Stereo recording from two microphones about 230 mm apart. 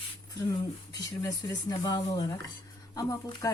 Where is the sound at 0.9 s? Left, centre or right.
Centre.